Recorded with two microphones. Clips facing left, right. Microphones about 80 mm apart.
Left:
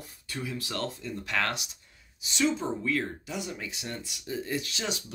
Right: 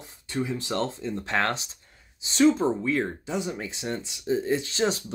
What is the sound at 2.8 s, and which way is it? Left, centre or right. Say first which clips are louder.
Speech: right 4 dB; right.